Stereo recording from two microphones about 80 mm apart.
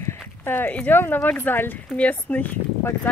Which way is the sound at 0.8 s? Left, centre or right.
Left.